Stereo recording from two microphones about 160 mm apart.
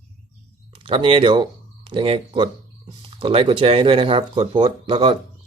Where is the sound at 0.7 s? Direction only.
35° right (ahead or behind).